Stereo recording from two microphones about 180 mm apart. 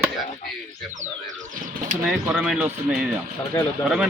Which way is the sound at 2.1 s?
5° right (ahead or behind).